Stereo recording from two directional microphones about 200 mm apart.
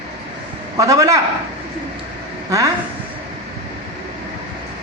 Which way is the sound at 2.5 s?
15° right (ahead or behind).